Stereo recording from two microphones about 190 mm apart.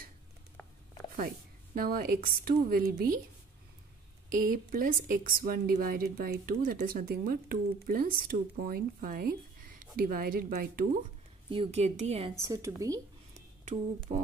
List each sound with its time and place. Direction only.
1.8 s a woman's voice: 50° right (ahead or behind)
4.3 s a woman's voice: 50° right (ahead or behind)
11.5 s a woman's voice: 30° right (ahead or behind)
12.4 s a woman's voice: 15° right (ahead or behind)
13.3 s a sound: 35° right (ahead or behind)